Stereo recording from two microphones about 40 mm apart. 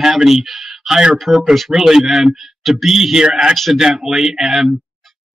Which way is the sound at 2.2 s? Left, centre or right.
Centre.